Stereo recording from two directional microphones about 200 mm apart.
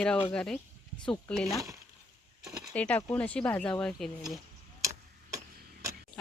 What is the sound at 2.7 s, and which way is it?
Speech, 5° left (ahead or behind).